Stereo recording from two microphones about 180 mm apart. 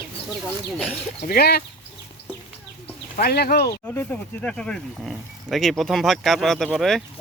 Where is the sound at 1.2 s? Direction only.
60° left (ahead or behind).